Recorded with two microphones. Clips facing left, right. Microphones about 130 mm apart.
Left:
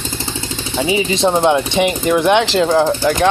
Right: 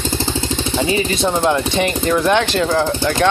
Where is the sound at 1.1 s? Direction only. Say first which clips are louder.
Left 3 dB; 20° left (ahead or behind).